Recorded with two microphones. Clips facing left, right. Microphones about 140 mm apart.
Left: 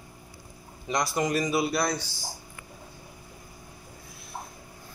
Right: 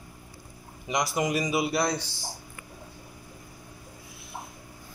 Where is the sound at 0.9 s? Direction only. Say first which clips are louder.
Even; 15° right (ahead or behind).